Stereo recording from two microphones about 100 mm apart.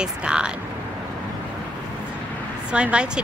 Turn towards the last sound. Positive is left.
turn(degrees=-10)  # may be behind; listen again after turning